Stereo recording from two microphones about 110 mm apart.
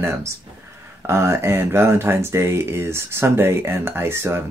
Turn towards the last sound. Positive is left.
turn(degrees=-20)  # may be behind; listen again after turning